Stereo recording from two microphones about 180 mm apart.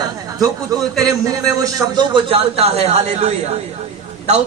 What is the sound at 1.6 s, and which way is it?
A man's voice, 25° right (ahead or behind).